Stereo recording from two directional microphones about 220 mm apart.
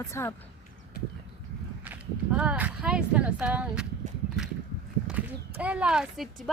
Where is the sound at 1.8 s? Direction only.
5° right (ahead or behind).